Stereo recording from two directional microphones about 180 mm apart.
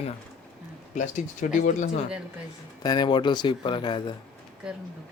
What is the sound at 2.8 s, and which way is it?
A man's voice, 25° left (ahead or behind).